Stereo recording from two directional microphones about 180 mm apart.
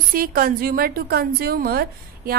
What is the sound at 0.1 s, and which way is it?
A woman's voice, 50° right (ahead or behind).